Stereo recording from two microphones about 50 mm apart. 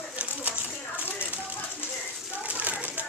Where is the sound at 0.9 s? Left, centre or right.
Right.